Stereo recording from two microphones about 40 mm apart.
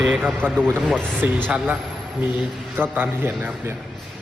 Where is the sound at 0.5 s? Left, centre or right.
Centre.